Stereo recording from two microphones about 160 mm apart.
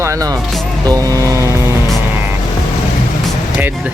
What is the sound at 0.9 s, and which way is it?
Music, 20° right (ahead or behind).